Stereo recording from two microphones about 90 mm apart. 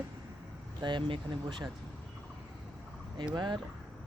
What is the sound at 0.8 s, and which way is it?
Speech, 60° right (ahead or behind).